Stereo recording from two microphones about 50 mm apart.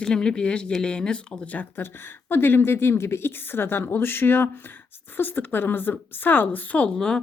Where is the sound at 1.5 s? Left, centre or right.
Left.